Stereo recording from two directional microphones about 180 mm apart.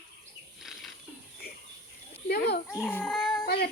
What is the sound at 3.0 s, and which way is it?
Cat, centre (ahead or behind).